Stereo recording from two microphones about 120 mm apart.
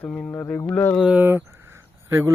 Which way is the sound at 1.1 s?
15° right (ahead or behind).